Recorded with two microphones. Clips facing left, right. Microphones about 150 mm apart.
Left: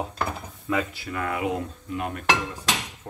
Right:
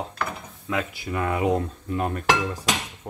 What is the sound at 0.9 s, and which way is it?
Speech, 20° right (ahead or behind).